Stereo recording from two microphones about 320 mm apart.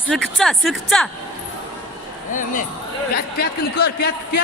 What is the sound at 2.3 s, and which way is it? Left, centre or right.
Speech, left.